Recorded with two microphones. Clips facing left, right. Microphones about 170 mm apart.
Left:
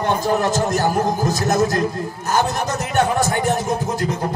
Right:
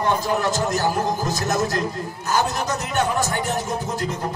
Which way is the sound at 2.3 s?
55° left (ahead or behind).